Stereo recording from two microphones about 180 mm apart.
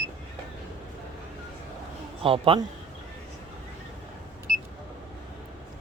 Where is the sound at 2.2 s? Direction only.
30° right (ahead or behind).